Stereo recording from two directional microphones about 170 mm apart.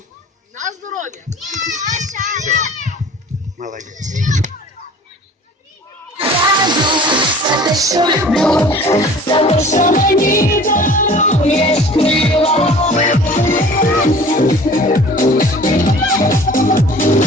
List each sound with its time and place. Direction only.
0.5 s a sound: 45° right (ahead or behind)
1.5 s a child's voice: 45° right (ahead or behind)
6.1 s music: 30° right (ahead or behind)
8.3 s music: 5° left (ahead or behind); by 9.4 s 20° left (ahead or behind)
9.4 s music: 40° left (ahead or behind)